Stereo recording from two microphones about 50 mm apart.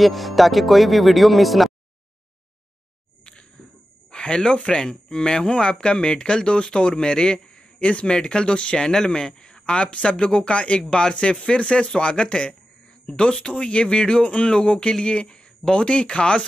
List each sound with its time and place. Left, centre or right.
0.0 s speech: centre
4.1 s speech: centre